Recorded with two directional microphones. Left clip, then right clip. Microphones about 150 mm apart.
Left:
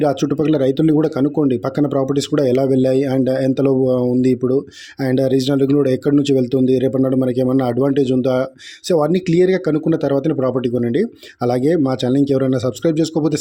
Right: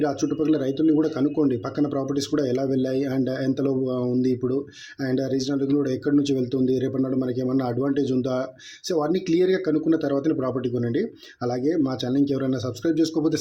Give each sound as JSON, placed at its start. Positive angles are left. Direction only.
{"t": 0.0, "sound": "speech", "side_deg": 55}